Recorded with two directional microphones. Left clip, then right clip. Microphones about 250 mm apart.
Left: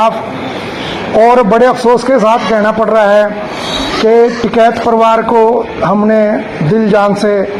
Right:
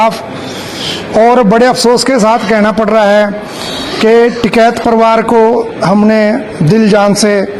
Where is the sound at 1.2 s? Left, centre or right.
Right.